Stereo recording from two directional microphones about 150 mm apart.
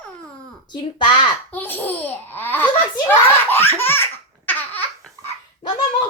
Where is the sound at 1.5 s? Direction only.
15° left (ahead or behind).